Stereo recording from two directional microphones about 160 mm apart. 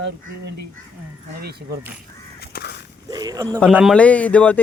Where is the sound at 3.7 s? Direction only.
5° right (ahead or behind).